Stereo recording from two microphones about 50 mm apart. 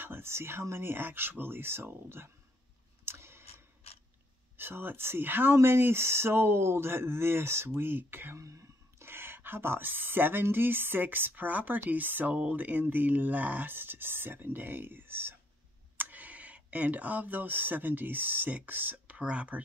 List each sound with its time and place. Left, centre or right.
0.0 s speech: right
3.1 s a sound: right
4.6 s speech: right
8.4 s speech: right
9.0 s speech: right
16.0 s speech: right